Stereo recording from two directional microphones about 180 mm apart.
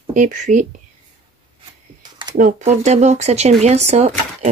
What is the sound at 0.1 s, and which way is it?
Speech, 45° right (ahead or behind).